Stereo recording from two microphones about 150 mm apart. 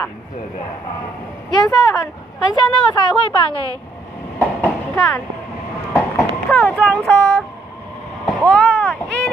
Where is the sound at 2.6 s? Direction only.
30° left (ahead or behind).